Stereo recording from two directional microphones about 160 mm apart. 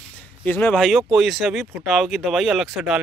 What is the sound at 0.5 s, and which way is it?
Speech, 10° left (ahead or behind).